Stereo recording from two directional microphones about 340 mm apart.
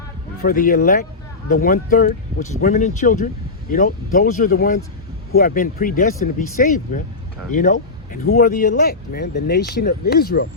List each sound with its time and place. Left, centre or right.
0.4 s speech: left